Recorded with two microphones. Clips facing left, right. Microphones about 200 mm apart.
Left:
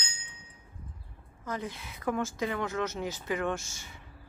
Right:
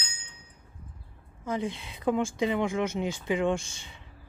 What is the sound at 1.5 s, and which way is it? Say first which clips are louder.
Speech: right 5 dB; 25° right (ahead or behind).